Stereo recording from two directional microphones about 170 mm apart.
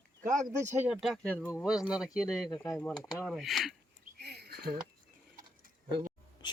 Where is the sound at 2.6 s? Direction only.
5° left (ahead or behind).